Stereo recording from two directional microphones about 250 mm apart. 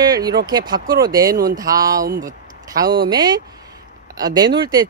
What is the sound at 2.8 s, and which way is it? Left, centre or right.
Speech, right.